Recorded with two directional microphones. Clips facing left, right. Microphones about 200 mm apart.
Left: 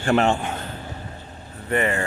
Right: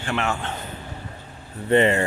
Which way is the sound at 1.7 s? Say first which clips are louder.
Right 5 dB; 25° right (ahead or behind).